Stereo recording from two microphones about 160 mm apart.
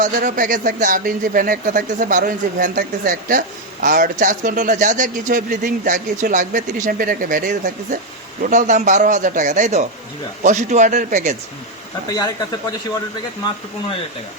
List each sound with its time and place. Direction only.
0.0 s a man's voice: 55° right (ahead or behind)